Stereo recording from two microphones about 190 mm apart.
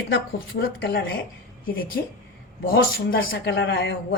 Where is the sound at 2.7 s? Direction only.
60° left (ahead or behind).